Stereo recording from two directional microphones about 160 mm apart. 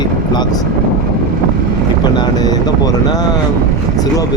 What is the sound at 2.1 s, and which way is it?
Speech, 25° left (ahead or behind).